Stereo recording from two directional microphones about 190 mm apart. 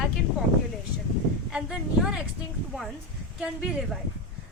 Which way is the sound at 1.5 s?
5° right (ahead or behind).